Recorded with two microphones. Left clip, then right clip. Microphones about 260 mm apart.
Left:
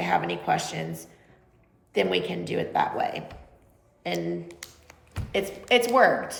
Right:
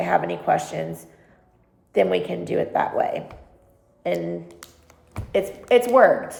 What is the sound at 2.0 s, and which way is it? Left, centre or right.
A woman's voice, centre.